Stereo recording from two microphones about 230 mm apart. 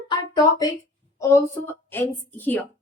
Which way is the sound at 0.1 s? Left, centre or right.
Centre.